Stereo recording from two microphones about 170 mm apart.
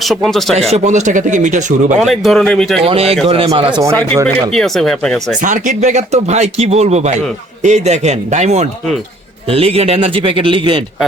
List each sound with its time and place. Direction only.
0.0 s speech: centre (ahead or behind)
0.7 s speech: 45° right (ahead or behind)
2.0 s speech: centre (ahead or behind)
2.8 s speech: 35° right (ahead or behind)
4.3 s speech: centre (ahead or behind)
5.4 s speech: 50° right (ahead or behind); by 10.8 s 30° right (ahead or behind)